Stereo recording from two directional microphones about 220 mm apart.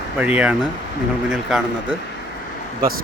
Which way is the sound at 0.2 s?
5° right (ahead or behind).